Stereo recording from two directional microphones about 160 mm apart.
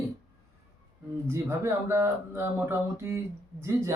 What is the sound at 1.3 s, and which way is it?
Speech, 15° right (ahead or behind).